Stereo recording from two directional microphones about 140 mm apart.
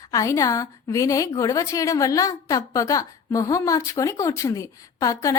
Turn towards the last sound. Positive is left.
turn(degrees=25)  # may be behind; listen again after turning